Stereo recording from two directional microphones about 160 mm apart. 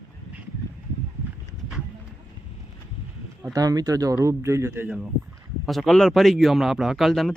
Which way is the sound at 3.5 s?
25° right (ahead or behind).